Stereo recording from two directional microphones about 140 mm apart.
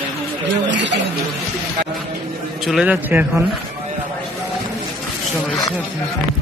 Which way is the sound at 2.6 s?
5° right (ahead or behind).